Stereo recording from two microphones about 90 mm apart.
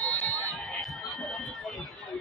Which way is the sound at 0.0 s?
15° left (ahead or behind).